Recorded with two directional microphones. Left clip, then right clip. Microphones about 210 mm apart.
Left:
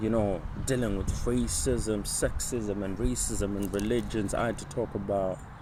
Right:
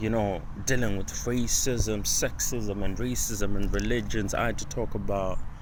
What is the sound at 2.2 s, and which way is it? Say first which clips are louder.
Speech: even; 5° left (ahead or behind).